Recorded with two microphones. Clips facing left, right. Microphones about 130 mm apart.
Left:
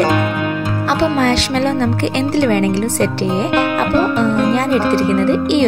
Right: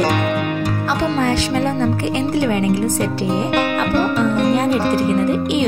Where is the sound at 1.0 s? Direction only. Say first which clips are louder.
Left 3 dB; 80° left.